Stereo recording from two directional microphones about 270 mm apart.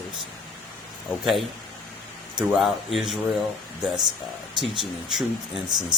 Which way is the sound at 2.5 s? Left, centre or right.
Centre.